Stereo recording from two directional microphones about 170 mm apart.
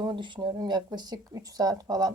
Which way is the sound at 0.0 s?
25° right (ahead or behind).